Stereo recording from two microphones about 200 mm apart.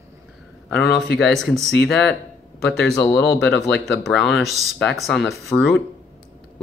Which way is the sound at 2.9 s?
10° left (ahead or behind).